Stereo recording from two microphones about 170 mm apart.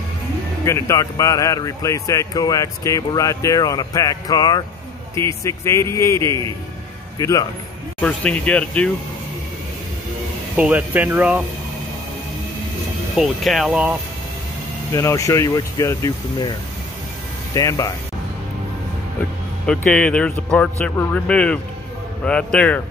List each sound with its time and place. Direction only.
0.7 s speech: 15° left (ahead or behind)
8.0 s speech: 5° left (ahead or behind)
10.5 s speech: 10° right (ahead or behind)
13.2 s speech: centre (ahead or behind)
14.9 s speech: 20° left (ahead or behind)
17.6 s speech: 20° left (ahead or behind)
19.6 s speech: 5° left (ahead or behind)